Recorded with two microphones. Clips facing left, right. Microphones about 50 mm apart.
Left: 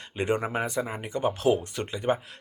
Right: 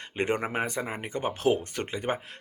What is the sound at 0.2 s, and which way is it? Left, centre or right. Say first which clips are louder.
Speech: left 1 dB; right.